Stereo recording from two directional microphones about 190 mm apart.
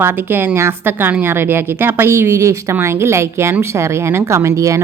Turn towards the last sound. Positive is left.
turn(degrees=-15)  # may be behind; listen again after turning